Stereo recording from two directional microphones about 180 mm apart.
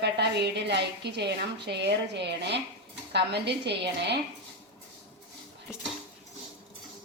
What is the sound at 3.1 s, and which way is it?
A woman's voice, 70° right (ahead or behind).